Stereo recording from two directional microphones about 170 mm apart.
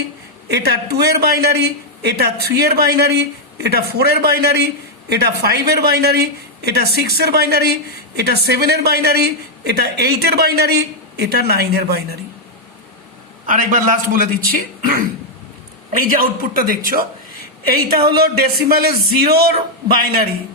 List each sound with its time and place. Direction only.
0.4 s a man's voice: 75° right (ahead or behind)
13.5 s speech: 50° right (ahead or behind); by 19.5 s 65° right (ahead or behind)